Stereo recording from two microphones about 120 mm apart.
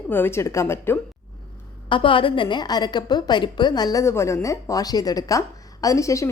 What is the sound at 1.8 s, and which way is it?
A woman's voice, 45° left (ahead or behind).